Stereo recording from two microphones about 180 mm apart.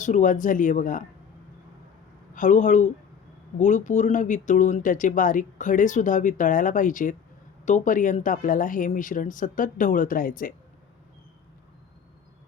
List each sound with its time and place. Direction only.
0.0 s speech: 45° left (ahead or behind)
2.3 s speech: 45° left (ahead or behind)